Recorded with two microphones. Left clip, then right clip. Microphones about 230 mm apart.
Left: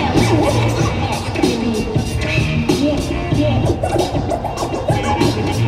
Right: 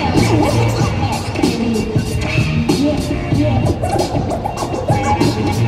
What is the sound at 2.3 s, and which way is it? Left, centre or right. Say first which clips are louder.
Music: even; centre.